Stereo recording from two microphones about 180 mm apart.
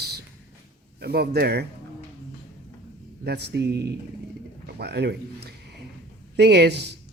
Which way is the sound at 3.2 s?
65° right (ahead or behind).